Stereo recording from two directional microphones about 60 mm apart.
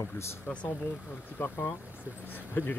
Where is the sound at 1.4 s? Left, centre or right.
Left.